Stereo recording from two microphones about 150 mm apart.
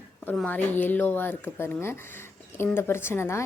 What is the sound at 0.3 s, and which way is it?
A woman's voice, 10° left (ahead or behind).